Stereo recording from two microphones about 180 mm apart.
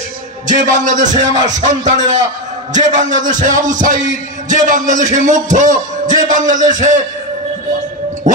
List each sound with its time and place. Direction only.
0.5 s a man's voice: 45° right (ahead or behind)